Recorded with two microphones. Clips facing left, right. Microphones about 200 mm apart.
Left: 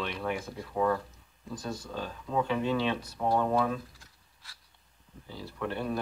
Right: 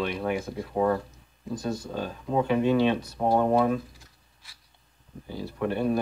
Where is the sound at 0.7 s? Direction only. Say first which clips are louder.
Right 3 dB; 25° right (ahead or behind).